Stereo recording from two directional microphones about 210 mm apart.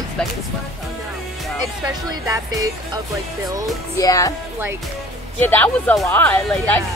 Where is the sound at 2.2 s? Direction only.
15° right (ahead or behind).